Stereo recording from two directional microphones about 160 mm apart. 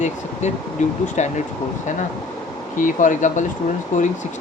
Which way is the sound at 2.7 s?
55° left (ahead or behind).